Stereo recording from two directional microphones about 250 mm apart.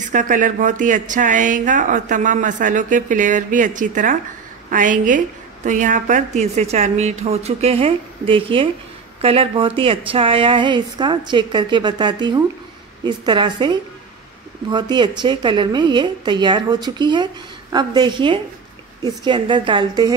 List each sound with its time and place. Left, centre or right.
0.0 s a woman's voice: right